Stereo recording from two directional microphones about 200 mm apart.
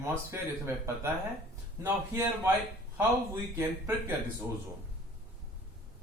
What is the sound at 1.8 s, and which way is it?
Speech, 15° right (ahead or behind).